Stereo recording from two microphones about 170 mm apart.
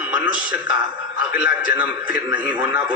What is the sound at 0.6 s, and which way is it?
Speech, 25° right (ahead or behind).